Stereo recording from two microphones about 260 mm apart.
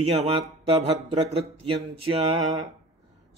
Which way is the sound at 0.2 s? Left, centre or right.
Right.